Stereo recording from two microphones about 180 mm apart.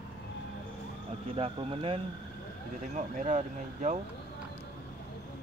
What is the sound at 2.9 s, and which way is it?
Speech, 40° right (ahead or behind).